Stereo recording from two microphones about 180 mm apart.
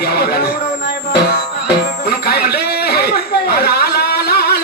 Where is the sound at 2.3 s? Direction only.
60° left (ahead or behind).